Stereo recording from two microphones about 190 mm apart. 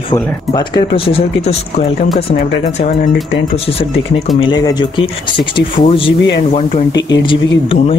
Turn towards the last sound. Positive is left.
turn(degrees=30)  # may be behind; listen again after turning